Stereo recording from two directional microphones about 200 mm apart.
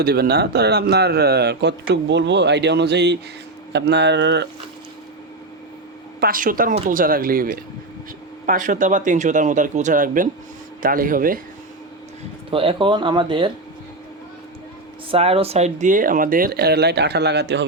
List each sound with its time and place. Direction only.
0.0 s a man's voice: 50° right (ahead or behind)
6.1 s speech: 45° right (ahead or behind)
12.5 s speech: 25° right (ahead or behind)
15.1 s speech: 30° right (ahead or behind); by 17.7 s 60° right (ahead or behind)